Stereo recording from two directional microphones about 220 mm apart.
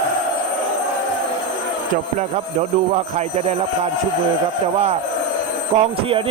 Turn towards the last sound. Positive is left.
turn(degrees=-25)  # may be behind; listen again after turning